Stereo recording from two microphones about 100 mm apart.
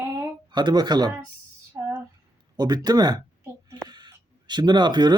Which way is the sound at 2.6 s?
45° right (ahead or behind).